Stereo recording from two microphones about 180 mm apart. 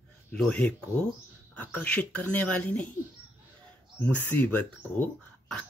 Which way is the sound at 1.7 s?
5° left (ahead or behind).